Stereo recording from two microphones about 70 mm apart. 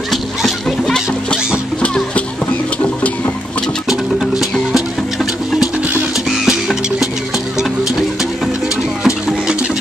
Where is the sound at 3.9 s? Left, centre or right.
Centre.